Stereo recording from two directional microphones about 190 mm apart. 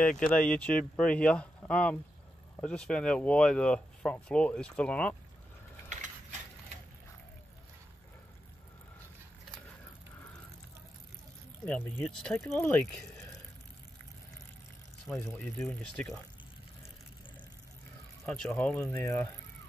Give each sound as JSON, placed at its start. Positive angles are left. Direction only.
{"t": 0.2, "sound": "speech", "side_deg": 5}
{"t": 5.9, "sound": "mechanisms", "side_deg": -40}
{"t": 11.6, "sound": "speech", "side_deg": 10}
{"t": 15.1, "sound": "speech", "side_deg": 5}
{"t": 18.2, "sound": "speech", "side_deg": 5}